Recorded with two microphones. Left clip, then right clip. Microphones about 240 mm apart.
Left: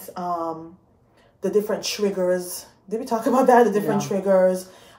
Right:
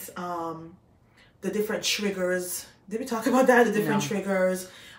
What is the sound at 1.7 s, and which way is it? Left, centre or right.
Speech, centre.